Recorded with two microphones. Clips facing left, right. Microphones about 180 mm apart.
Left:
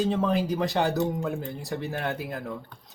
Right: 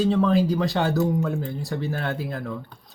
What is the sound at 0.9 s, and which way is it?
Speech, 35° left (ahead or behind).